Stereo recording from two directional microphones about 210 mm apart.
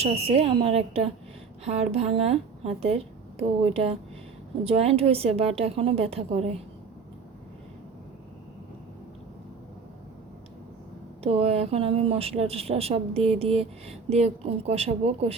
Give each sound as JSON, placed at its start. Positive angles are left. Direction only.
{"t": 0.0, "sound": "speech", "side_deg": -30}
{"t": 11.2, "sound": "speech", "side_deg": -30}